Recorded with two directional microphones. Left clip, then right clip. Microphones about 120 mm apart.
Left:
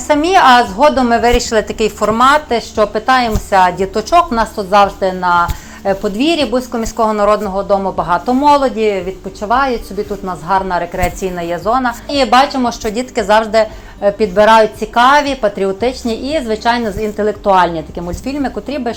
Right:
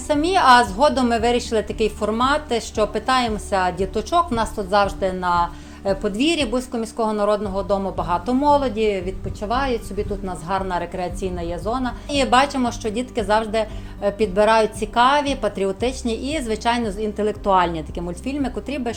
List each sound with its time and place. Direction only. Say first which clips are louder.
0.1 s a woman's voice: left 6 dB; 30° right (ahead or behind)
4.3 s a woman's voice: left 8 dB; 20° right (ahead or behind)
8.7 s a woman's voice: left 6 dB; 35° right (ahead or behind)